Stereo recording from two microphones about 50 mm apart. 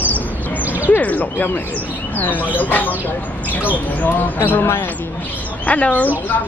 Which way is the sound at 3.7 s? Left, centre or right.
Left.